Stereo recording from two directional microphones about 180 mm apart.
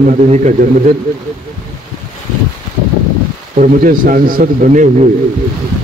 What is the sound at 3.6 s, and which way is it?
A man's voice, 50° right (ahead or behind).